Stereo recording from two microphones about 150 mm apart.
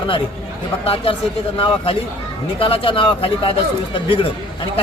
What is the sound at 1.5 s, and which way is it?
Speech, 40° left (ahead or behind).